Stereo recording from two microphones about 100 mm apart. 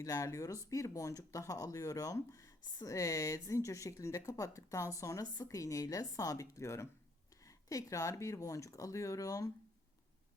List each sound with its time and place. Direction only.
0.0 s a woman's voice: 35° left (ahead or behind)